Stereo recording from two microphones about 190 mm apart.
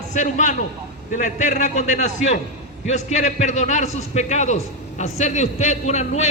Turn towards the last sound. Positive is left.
turn(degrees=35)  # may be behind; listen again after turning